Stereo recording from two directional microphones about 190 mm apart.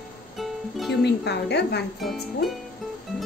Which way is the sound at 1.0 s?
60° left (ahead or behind).